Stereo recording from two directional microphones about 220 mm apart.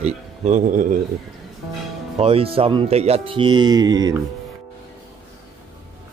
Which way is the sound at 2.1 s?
25° right (ahead or behind).